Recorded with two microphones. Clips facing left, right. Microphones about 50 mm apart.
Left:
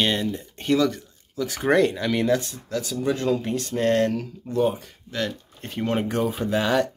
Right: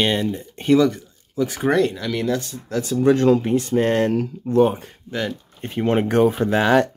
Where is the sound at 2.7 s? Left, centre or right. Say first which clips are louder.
Right 6 dB; right.